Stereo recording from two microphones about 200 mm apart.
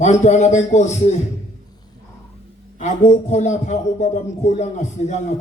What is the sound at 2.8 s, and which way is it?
A man's voice, 40° left (ahead or behind).